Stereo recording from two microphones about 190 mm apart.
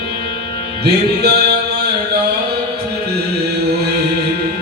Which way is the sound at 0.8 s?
60° right (ahead or behind).